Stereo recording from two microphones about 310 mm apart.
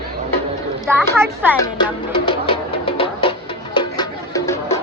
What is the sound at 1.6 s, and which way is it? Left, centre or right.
Music, centre.